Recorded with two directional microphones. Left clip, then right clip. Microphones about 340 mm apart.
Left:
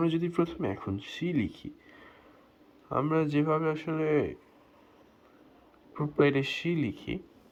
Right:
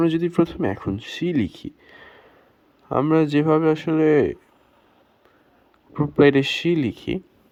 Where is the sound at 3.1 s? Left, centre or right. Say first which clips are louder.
Right 10 dB; centre.